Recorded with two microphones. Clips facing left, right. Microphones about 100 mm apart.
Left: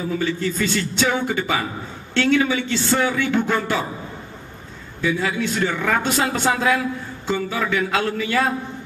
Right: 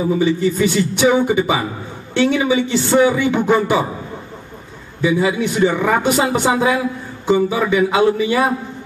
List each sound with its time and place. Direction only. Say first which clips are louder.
0.0 s speech: right 7 dB; 15° right (ahead or behind)
5.0 s speech: right 6 dB; 15° right (ahead or behind)